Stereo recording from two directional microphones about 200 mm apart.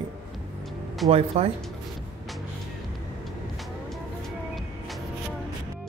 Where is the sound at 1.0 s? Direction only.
30° right (ahead or behind).